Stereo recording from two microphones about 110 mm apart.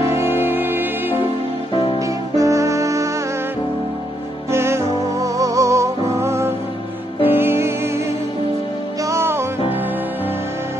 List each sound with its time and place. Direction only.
0.1 s music: 20° right (ahead or behind)
1.7 s music: 50° left (ahead or behind)
2.0 s music: 30° right (ahead or behind)
4.5 s music: 25° right (ahead or behind)
9.0 s music: 25° right (ahead or behind)